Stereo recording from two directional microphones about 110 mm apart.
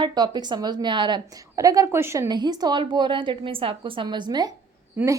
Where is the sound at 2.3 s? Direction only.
40° right (ahead or behind).